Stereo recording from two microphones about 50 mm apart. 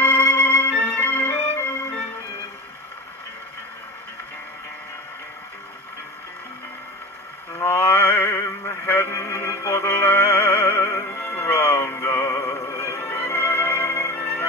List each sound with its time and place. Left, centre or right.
0.0 s music: left
7.5 s a sound: left
9.1 s music: left
11.1 s music: left